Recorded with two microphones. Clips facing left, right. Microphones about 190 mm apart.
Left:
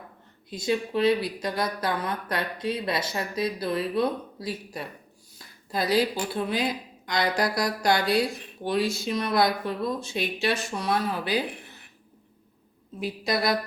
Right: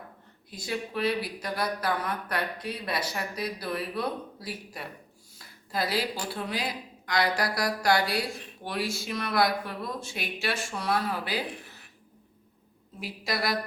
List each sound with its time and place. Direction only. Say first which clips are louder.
0.5 s speech: left 7 dB; 20° left (ahead or behind)
5.7 s speech: left 5 dB; 20° left (ahead or behind)
13.0 s speech: left 5 dB; 20° left (ahead or behind)